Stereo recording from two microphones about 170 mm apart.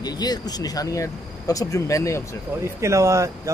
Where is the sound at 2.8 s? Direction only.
15° right (ahead or behind).